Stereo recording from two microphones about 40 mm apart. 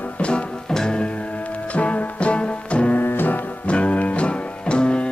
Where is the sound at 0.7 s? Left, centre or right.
Centre.